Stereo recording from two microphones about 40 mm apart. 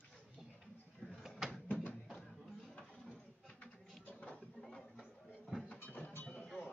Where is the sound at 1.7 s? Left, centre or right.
Left.